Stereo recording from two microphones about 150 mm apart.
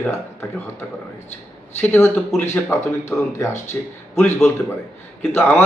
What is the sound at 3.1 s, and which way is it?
A man's voice, 20° left (ahead or behind).